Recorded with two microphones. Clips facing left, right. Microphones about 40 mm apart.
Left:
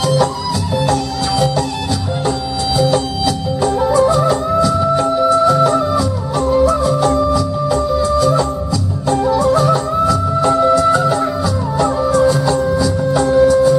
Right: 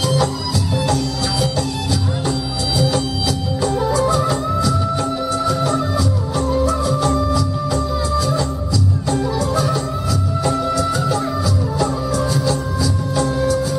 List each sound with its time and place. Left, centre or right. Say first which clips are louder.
2.8 s music: left 5 dB; centre
9.6 s music: left 6 dB; centre